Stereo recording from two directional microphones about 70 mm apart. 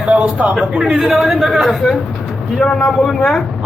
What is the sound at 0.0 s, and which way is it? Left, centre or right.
A man's voice, right.